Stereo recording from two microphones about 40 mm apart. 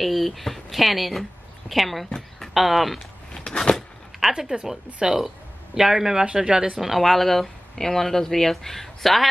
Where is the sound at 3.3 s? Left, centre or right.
Centre.